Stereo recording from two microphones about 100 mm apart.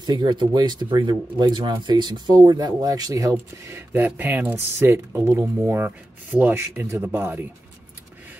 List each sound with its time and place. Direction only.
0.0 s speech: 50° right (ahead or behind)
3.9 s speech: 20° right (ahead or behind)